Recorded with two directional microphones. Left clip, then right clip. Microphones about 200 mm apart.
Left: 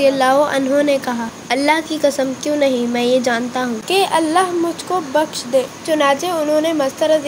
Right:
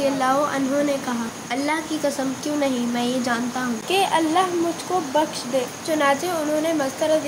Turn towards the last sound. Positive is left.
turn(degrees=30)  # may be behind; listen again after turning